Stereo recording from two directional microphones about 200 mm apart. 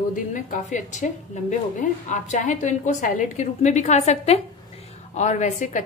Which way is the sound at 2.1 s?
40° left (ahead or behind).